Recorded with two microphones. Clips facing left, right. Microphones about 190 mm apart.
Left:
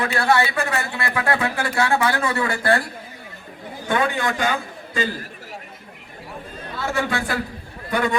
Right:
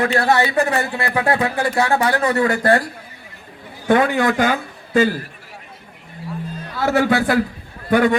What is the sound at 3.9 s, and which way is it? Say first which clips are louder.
Speech: right 6 dB; 60° right (ahead or behind).